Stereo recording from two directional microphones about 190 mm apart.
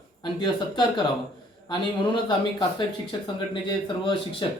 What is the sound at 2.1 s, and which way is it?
Speech, 25° left (ahead or behind).